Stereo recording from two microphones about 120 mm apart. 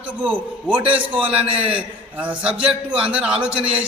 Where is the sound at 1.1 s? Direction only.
50° right (ahead or behind).